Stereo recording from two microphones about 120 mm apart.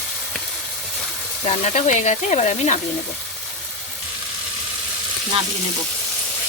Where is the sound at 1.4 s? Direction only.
65° left (ahead or behind).